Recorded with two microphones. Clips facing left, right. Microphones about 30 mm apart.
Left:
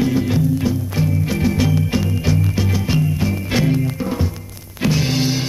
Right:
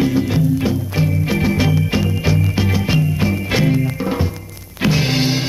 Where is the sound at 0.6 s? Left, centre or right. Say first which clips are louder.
Right 1 dB; centre.